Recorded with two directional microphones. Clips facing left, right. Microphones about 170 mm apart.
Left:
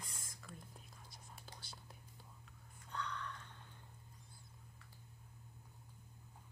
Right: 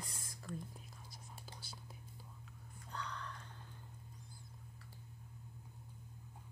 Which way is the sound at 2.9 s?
35° right (ahead or behind).